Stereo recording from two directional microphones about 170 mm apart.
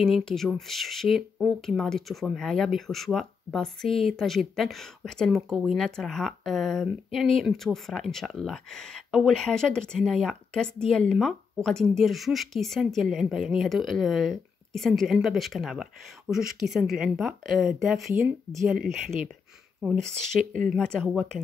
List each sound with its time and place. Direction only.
0.0 s speech: centre (ahead or behind)
18.1 s speech: 15° right (ahead or behind)
19.8 s speech: 5° right (ahead or behind)
20.7 s speech: 5° left (ahead or behind)